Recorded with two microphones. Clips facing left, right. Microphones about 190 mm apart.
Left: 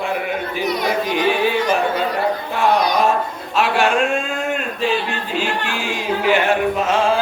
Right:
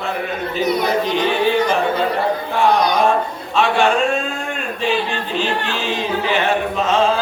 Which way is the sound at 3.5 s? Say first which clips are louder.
Right 1 dB; 5° left (ahead or behind).